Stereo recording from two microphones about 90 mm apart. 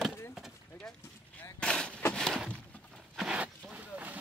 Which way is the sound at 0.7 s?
10° left (ahead or behind).